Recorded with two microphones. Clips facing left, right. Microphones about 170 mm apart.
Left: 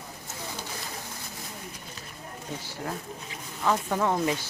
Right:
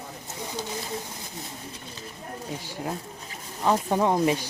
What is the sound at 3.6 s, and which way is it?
Speech, 25° right (ahead or behind).